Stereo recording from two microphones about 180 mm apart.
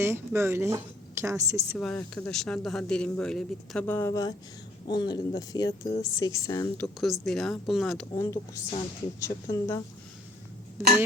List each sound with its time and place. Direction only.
0.0 s a woman's voice: 15° right (ahead or behind)
1.8 s speech: 5° left (ahead or behind)
7.0 s speech: centre (ahead or behind)
8.2 s a woman's voice: 15° left (ahead or behind)